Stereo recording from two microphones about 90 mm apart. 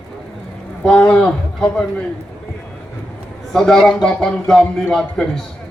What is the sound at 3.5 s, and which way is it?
A man's voice, 5° left (ahead or behind).